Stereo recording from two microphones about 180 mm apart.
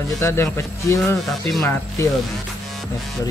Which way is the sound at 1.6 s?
15° left (ahead or behind).